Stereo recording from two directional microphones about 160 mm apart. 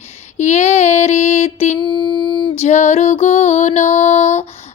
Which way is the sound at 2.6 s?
45° left (ahead or behind).